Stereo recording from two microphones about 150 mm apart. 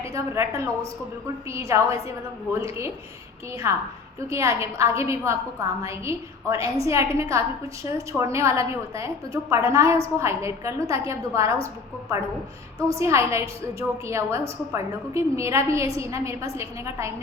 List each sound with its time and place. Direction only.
0.0 s a woman's voice: 20° right (ahead or behind)
4.3 s a woman's voice: 20° right (ahead or behind)
13.0 s a woman's voice: 20° right (ahead or behind)